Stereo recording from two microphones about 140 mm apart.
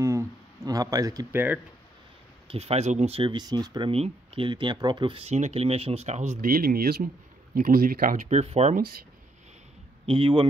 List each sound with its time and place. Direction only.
0.0 s speech: 20° right (ahead or behind)
1.3 s speech: 15° right (ahead or behind)
2.4 s speech: 45° right (ahead or behind)
6.4 s speech: 90° right; by 8.7 s 50° right (ahead or behind)
10.0 s a man's voice: 40° right (ahead or behind)